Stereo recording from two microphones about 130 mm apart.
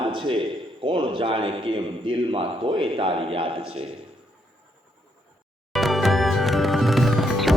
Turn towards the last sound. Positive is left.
turn(degrees=0)  # may be behind; listen again after turning